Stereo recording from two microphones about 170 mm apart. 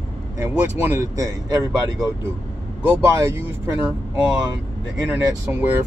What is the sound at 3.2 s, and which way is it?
Speech, 15° right (ahead or behind).